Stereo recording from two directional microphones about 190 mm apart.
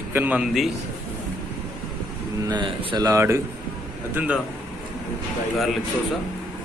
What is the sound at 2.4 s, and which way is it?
A man's voice, 25° right (ahead or behind).